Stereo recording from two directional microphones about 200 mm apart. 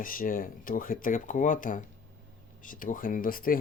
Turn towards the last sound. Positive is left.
turn(degrees=45)  # may be behind; listen again after turning